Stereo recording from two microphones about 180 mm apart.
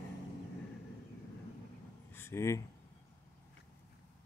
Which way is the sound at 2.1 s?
15° left (ahead or behind).